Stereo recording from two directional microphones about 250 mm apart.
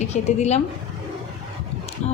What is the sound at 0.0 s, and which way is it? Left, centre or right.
Speech, left.